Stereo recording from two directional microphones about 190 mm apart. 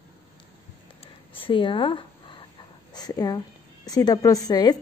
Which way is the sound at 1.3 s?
25° left (ahead or behind).